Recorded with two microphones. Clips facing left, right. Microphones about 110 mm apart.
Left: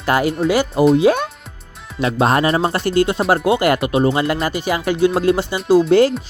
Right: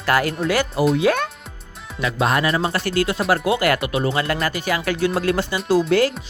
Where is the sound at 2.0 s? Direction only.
35° left (ahead or behind).